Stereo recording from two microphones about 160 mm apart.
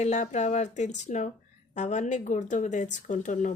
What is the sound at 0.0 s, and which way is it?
Speech, 45° left (ahead or behind).